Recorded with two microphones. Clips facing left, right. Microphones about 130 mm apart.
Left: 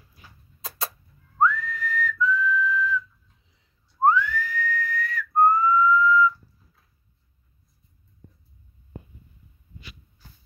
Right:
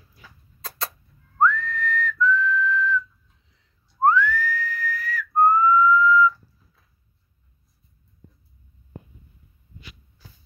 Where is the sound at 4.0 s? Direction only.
15° left (ahead or behind).